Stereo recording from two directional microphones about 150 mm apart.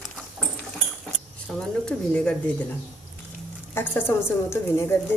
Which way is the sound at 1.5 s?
5° left (ahead or behind).